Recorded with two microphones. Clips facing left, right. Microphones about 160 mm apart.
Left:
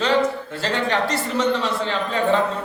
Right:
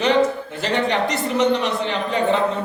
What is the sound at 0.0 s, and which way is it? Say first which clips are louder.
Speech: right 2 dB; 20° right (ahead or behind).